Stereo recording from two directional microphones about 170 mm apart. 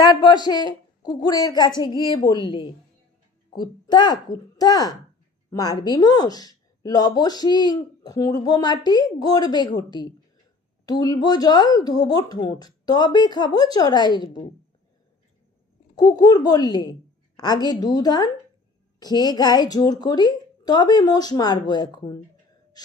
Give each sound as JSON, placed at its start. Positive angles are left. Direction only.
{"t": 0.0, "sound": "a woman's voice", "side_deg": 25}
{"t": 16.0, "sound": "a woman's voice", "side_deg": 25}